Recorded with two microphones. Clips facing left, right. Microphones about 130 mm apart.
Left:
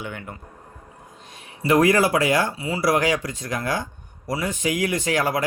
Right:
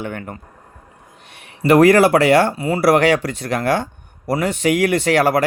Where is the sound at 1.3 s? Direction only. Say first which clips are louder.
Right 6 dB; 70° right (ahead or behind).